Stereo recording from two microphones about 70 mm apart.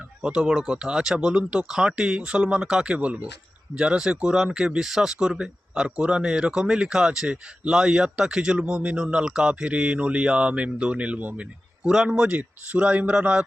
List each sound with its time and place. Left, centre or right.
0.2 s speech: centre
11.8 s speech: centre